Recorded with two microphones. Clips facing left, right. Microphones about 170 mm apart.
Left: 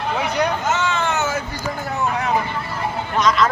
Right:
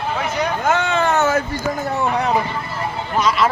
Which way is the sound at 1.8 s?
35° right (ahead or behind).